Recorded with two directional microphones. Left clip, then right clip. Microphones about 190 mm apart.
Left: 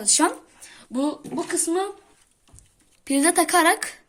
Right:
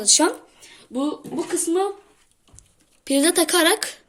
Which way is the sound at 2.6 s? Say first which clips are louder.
Right 3 dB; 35° left (ahead or behind).